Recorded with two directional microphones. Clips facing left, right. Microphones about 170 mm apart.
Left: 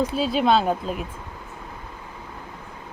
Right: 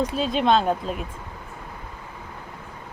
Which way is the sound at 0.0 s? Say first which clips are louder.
Left 1 dB; 5° left (ahead or behind).